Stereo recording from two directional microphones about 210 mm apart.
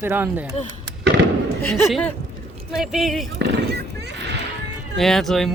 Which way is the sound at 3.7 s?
55° right (ahead or behind).